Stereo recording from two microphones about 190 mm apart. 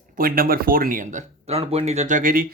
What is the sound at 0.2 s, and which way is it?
Speech, 50° right (ahead or behind).